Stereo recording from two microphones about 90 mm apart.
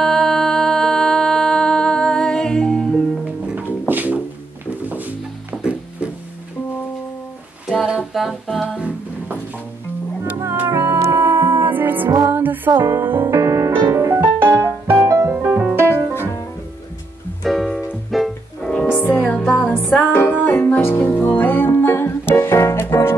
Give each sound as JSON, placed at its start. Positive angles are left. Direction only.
{"t": 0.0, "sound": "music", "side_deg": 5}
{"t": 3.8, "sound": "music", "side_deg": -20}
{"t": 7.6, "sound": "a capella", "side_deg": -5}
{"t": 8.7, "sound": "music", "side_deg": -15}
{"t": 10.7, "sound": "music", "side_deg": -30}
{"t": 17.4, "sound": "music", "side_deg": 0}
{"t": 18.9, "sound": "music", "side_deg": 20}